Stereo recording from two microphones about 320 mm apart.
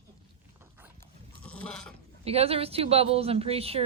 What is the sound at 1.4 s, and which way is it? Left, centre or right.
Sheep, centre.